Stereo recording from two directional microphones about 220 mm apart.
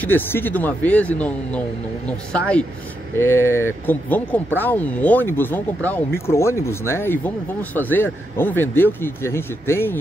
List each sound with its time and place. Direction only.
0.0 s speech: 10° left (ahead or behind)